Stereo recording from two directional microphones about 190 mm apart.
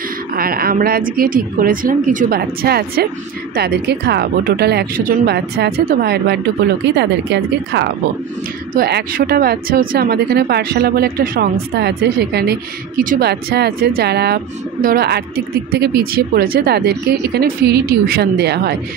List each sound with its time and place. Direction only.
0.4 s a woman's voice: 50° right (ahead or behind)
8.7 s a woman's voice: 55° right (ahead or behind)